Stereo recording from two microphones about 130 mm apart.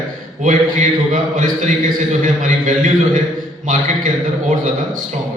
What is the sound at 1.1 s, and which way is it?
A man's voice, 80° right.